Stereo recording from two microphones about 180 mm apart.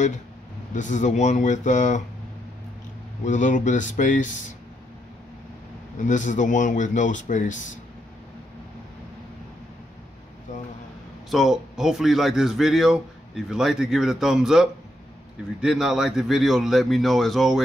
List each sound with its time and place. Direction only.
0.7 s speech: 45° left (ahead or behind)
3.3 s speech: 45° left (ahead or behind)
5.9 s speech: 45° left (ahead or behind)
11.2 s a man's voice: centre (ahead or behind)